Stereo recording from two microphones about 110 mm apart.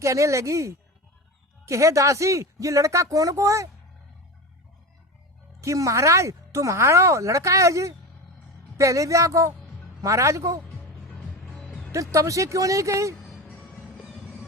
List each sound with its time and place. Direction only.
0.0 s speech: 30° right (ahead or behind)
5.5 s speech: 30° right (ahead or behind)
10.7 s music: 10° left (ahead or behind)
11.9 s speech: 30° right (ahead or behind)